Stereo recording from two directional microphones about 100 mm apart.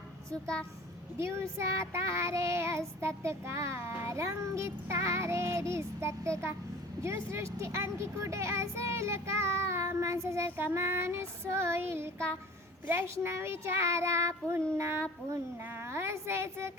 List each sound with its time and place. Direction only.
1.2 s speech: 25° right (ahead or behind)